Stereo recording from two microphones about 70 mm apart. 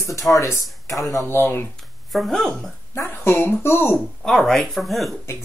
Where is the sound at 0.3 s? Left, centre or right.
Left.